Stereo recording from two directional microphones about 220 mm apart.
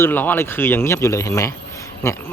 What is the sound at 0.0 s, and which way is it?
Speech, 10° left (ahead or behind).